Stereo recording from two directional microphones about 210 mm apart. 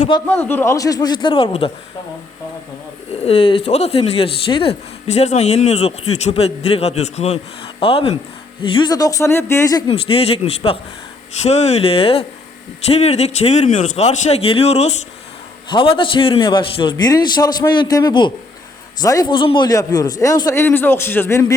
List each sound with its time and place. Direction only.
0.3 s a man's voice: 10° left (ahead or behind); by 1.7 s 25° left (ahead or behind)
3.1 s a man's voice: 30° left (ahead or behind); by 21.5 s 15° left (ahead or behind)